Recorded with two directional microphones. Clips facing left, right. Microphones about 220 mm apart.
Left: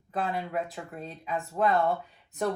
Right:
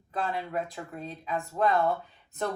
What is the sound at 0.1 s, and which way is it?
Speech, centre (ahead or behind).